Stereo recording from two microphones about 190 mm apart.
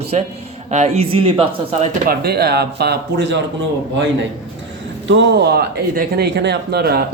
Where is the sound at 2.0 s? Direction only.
55° right (ahead or behind).